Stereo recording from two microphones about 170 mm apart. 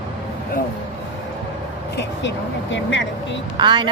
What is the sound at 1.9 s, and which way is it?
Vehicle, 90° left.